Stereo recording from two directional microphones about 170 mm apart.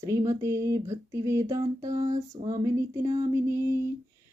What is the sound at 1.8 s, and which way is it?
Speech, 20° right (ahead or behind).